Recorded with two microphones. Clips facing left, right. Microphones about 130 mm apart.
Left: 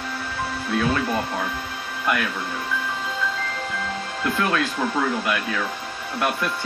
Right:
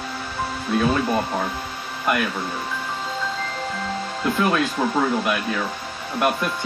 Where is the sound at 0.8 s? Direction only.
15° right (ahead or behind).